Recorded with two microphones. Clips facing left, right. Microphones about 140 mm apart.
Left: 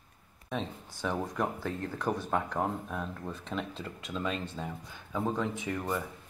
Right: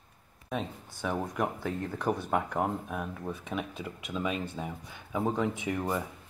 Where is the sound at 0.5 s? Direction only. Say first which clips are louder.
Right 1 dB; centre (ahead or behind).